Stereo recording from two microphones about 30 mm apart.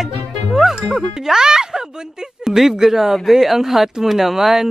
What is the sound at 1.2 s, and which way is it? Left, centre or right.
Speech, right.